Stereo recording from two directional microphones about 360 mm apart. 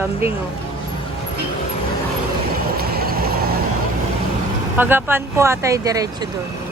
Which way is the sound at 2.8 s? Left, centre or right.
Right.